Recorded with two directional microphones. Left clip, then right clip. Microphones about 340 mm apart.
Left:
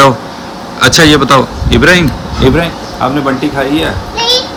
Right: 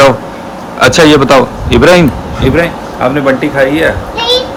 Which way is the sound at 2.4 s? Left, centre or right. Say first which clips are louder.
Left 2 dB; left.